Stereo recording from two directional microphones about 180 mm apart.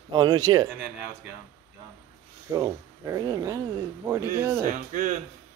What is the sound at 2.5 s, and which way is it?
A man's voice, 20° right (ahead or behind).